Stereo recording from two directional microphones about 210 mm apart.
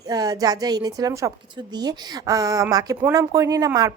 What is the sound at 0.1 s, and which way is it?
Speech, 20° right (ahead or behind).